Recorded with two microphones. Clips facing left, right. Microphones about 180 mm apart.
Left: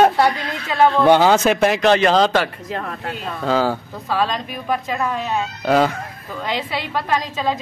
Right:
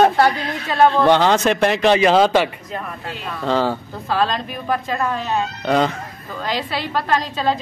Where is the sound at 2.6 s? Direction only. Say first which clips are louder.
Left 2 dB; 85° left.